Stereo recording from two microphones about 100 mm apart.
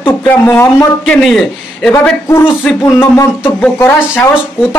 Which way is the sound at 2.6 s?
20° left (ahead or behind).